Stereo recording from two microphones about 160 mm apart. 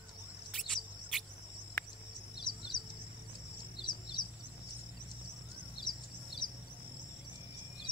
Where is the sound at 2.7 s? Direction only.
Centre (ahead or behind).